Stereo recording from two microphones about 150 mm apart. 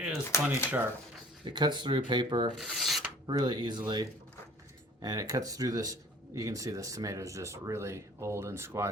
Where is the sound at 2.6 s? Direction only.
Centre (ahead or behind).